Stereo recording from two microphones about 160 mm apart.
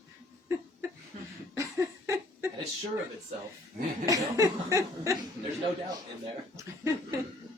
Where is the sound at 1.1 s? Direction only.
50° right (ahead or behind).